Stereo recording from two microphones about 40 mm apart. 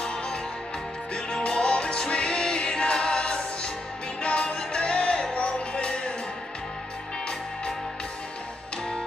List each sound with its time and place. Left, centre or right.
0.0 s music: left